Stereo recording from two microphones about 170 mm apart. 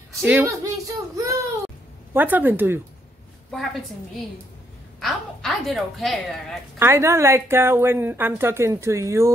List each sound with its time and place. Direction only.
0.1 s a woman's voice: 15° right (ahead or behind)
5.0 s a woman's voice: centre (ahead or behind)
6.8 s a woman's voice: 15° right (ahead or behind)